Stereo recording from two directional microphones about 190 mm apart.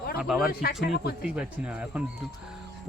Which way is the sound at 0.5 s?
55° left (ahead or behind).